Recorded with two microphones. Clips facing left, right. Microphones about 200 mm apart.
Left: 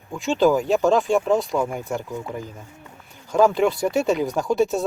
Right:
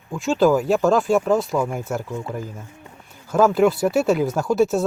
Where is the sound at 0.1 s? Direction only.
Centre (ahead or behind).